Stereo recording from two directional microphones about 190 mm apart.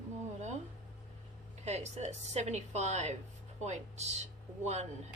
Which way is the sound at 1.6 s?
35° right (ahead or behind).